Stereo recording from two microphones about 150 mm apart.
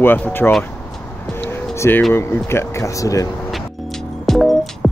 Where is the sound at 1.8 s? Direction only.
15° left (ahead or behind).